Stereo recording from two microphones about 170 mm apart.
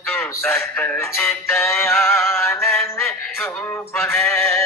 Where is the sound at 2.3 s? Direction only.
15° left (ahead or behind).